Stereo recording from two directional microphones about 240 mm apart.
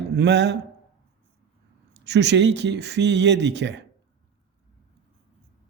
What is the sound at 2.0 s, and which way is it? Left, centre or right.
A man's voice, right.